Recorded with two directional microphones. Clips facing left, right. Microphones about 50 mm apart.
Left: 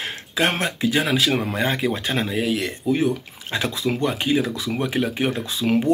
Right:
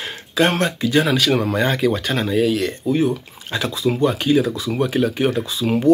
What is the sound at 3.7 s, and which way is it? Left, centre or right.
Speech, left.